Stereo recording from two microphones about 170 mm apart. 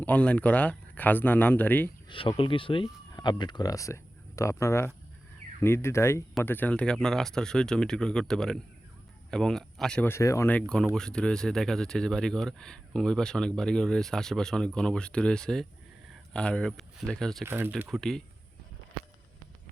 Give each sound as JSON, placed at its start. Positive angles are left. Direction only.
{"t": 0.0, "sound": "speech", "side_deg": 10}
{"t": 2.0, "sound": "speech", "side_deg": 30}
{"t": 17.4, "sound": "speech", "side_deg": -15}
{"t": 17.7, "sound": "speech", "side_deg": 0}